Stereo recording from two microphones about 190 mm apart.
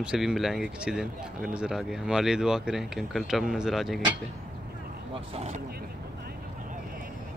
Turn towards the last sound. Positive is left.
turn(degrees=-30)  # may be behind; listen again after turning